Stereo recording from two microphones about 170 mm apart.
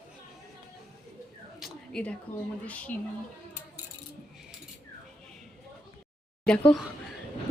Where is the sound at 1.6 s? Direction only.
5° left (ahead or behind).